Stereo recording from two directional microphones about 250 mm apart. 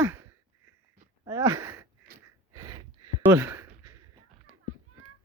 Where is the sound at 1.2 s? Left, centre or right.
Centre.